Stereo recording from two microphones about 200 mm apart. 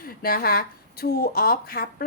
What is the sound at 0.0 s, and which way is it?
Speech, 50° left (ahead or behind).